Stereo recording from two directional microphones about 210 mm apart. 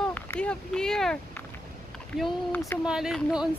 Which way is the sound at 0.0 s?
5° left (ahead or behind).